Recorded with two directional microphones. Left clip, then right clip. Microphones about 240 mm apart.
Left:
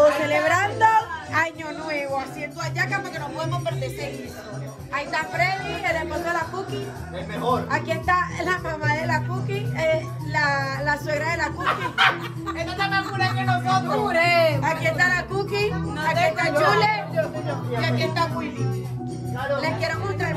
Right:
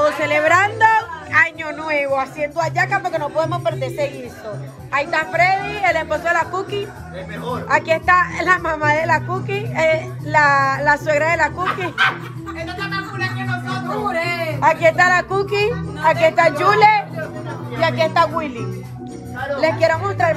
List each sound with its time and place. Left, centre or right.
0.0 s a woman's voice: centre
7.7 s speech: centre
19.5 s speech: centre